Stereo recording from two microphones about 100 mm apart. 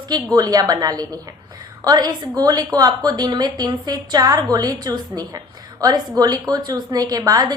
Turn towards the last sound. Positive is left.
turn(degrees=-40)  # may be behind; listen again after turning